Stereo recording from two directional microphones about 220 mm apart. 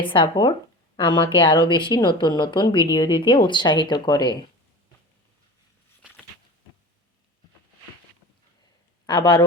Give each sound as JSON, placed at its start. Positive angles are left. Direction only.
{"t": 0.0, "sound": "speech", "side_deg": 20}
{"t": 9.0, "sound": "speech", "side_deg": 20}